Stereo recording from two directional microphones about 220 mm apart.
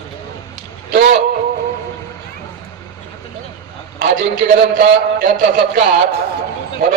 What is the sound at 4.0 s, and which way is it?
A man's voice, 40° right (ahead or behind).